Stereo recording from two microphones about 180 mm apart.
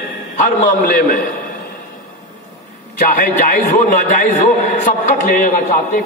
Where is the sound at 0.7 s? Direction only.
50° left (ahead or behind).